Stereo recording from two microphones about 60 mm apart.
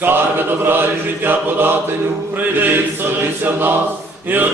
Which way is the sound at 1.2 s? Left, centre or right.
Right.